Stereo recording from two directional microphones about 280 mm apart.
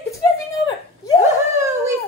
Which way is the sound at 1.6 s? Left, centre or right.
Centre.